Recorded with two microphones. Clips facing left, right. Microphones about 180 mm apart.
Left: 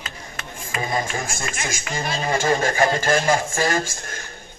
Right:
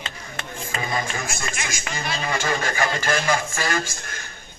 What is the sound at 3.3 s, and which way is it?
Speech, 35° left (ahead or behind).